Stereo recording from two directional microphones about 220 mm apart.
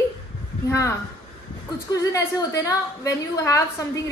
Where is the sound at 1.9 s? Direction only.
15° left (ahead or behind).